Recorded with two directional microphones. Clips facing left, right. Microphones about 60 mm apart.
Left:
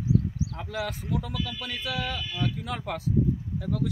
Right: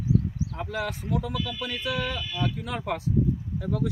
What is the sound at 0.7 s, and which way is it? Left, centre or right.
Speech, centre.